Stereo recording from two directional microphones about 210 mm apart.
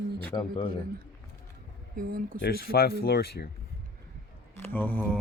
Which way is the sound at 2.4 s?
45° left (ahead or behind).